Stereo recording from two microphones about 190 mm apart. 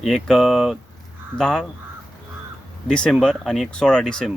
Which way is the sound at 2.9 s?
5° left (ahead or behind).